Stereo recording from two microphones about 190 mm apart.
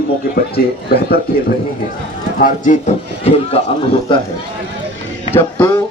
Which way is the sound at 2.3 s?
45° left (ahead or behind).